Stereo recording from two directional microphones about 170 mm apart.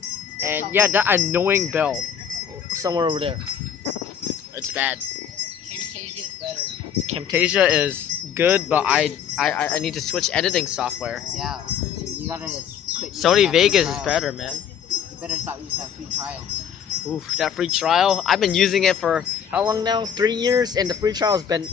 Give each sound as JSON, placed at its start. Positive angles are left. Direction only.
{"t": 0.4, "sound": "speech", "side_deg": -10}
{"t": 2.7, "sound": "speech", "side_deg": -20}
{"t": 4.6, "sound": "speech", "side_deg": -10}
{"t": 7.3, "sound": "speech", "side_deg": -5}
{"t": 10.7, "sound": "speech", "side_deg": -5}
{"t": 13.2, "sound": "speech", "side_deg": 0}
{"t": 15.2, "sound": "speech", "side_deg": -10}
{"t": 17.1, "sound": "speech", "side_deg": 0}
{"t": 19.7, "sound": "speech", "side_deg": -25}